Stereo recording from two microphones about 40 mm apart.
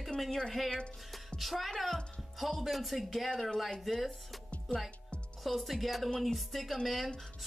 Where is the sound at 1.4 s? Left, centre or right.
Centre.